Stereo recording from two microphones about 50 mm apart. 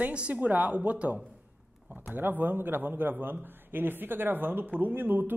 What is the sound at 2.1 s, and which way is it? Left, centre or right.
A man's voice, right.